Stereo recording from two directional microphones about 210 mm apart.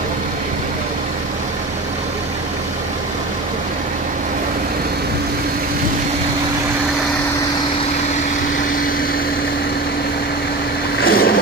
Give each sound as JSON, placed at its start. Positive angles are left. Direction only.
{"t": 11.1, "sound": "vehicle", "side_deg": 45}